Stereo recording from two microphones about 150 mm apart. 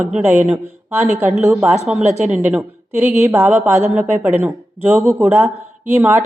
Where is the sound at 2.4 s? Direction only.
15° right (ahead or behind).